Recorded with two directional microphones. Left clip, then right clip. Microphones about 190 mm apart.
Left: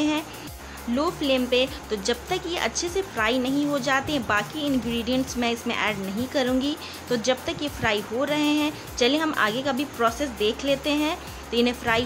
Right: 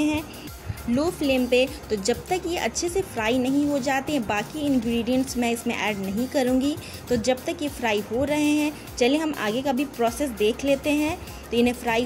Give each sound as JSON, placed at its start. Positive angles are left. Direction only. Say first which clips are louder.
{"t": 0.9, "sound": "a woman's voice", "louder": "even", "side_deg": -20}